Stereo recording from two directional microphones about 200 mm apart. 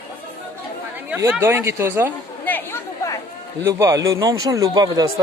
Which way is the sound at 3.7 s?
15° right (ahead or behind).